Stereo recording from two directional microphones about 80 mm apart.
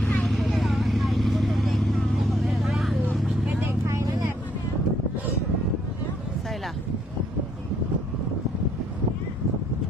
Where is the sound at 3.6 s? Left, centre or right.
Right.